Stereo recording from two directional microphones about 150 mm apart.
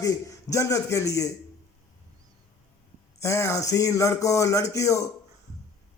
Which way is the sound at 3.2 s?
20° left (ahead or behind).